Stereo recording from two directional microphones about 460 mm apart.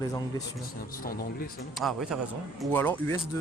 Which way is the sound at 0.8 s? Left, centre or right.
Centre.